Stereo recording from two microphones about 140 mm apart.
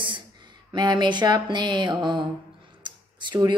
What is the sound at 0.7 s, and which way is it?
Speech, 30° right (ahead or behind).